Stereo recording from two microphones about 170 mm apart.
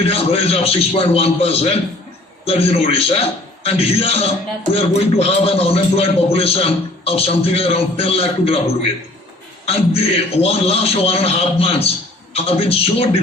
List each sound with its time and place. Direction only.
0.0 s a man's voice: 35° left (ahead or behind)